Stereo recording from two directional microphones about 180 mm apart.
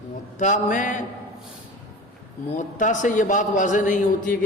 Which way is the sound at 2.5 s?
40° left (ahead or behind).